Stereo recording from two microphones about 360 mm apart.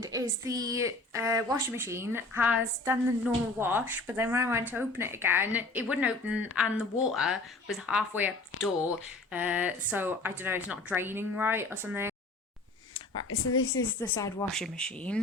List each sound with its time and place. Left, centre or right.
0.0 s speech: centre
12.9 s speech: left
14.2 s speech: centre